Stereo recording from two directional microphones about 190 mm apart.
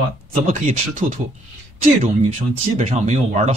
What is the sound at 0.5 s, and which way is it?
Speech, 40° right (ahead or behind).